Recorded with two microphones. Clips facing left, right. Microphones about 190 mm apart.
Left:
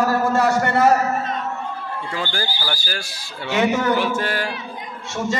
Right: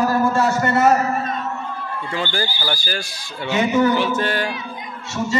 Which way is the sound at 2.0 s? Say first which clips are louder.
Right 3 dB; centre (ahead or behind).